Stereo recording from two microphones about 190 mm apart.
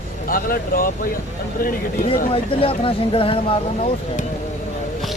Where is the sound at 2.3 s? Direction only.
30° left (ahead or behind).